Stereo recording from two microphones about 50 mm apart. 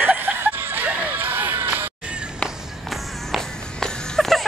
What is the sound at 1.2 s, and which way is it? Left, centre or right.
Music, right.